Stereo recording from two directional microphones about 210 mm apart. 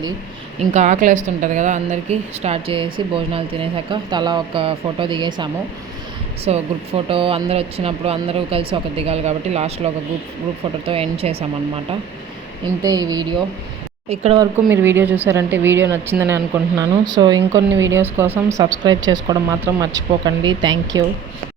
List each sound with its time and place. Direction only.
0.7 s a woman's voice: 35° right (ahead or behind)
12.8 s speech: 15° right (ahead or behind)
14.5 s speech: 10° right (ahead or behind)
18.6 s speech: 20° right (ahead or behind)